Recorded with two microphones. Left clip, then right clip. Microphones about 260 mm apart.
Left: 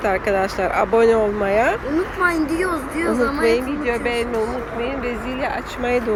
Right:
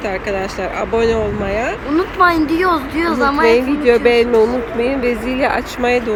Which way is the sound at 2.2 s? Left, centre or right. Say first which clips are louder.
Right 7 dB; right.